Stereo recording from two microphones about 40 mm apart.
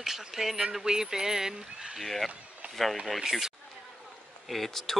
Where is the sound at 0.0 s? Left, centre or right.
Centre.